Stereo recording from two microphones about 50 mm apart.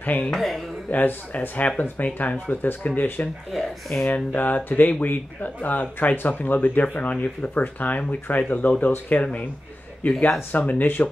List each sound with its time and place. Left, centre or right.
0.0 s speech: left
0.3 s speech: centre
0.8 s speech: left
3.5 s speech: centre
4.1 s speech: left
10.0 s speech: left